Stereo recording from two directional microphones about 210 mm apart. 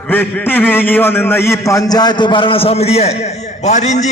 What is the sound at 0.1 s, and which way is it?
A man's voice, 10° left (ahead or behind).